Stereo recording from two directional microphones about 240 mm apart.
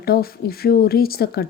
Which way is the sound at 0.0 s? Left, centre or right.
Left.